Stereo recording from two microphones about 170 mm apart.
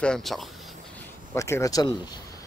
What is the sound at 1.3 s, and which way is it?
Speech, 15° left (ahead or behind).